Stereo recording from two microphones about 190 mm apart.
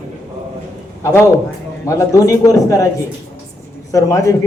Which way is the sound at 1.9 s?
15° left (ahead or behind).